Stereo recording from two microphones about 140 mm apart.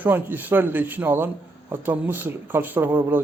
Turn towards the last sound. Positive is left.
turn(degrees=-15)  # may be behind; listen again after turning